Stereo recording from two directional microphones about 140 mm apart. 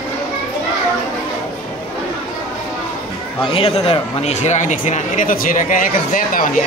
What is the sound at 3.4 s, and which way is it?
Speech, 40° left (ahead or behind).